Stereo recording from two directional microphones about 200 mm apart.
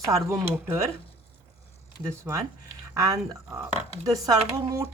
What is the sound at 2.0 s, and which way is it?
Speech, 15° right (ahead or behind).